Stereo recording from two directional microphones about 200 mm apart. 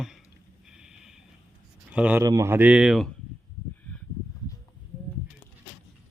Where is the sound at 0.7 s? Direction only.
5° right (ahead or behind).